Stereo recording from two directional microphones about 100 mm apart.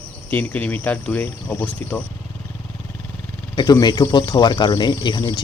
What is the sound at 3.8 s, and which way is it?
Speech, 45° left (ahead or behind).